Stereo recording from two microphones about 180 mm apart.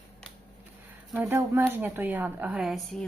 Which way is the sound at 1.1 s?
10° right (ahead or behind).